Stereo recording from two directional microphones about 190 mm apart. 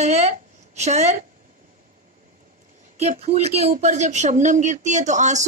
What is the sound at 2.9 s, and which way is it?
Speech, 35° right (ahead or behind).